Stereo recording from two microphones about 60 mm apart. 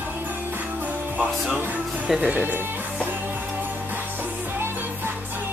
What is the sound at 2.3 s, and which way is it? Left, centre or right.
Speech, right.